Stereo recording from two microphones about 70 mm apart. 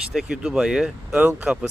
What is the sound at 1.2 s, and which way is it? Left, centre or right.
Speech, right.